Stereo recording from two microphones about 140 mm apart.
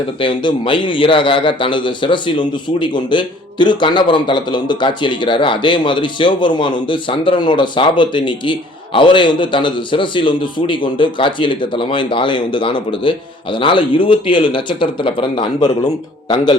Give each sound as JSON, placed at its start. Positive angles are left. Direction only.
{"t": 0.2, "sound": "a man's voice", "side_deg": 35}